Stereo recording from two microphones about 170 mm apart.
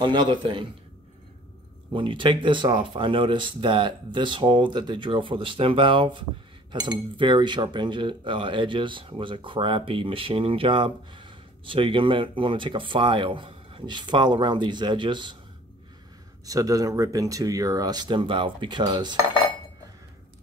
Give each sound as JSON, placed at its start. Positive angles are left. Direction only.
{"t": 0.0, "sound": "speech", "side_deg": -25}
{"t": 1.9, "sound": "speech", "side_deg": -30}
{"t": 16.4, "sound": "speech", "side_deg": -20}